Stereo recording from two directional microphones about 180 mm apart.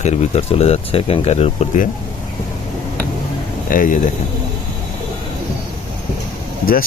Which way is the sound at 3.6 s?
50° left (ahead or behind).